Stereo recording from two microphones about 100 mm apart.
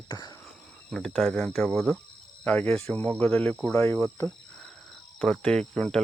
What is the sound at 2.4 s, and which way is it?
Speech, 15° left (ahead or behind).